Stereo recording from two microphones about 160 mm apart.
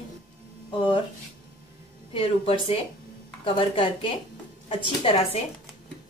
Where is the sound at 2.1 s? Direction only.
35° left (ahead or behind).